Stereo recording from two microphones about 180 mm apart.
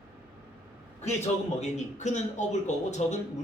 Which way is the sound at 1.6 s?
40° left (ahead or behind).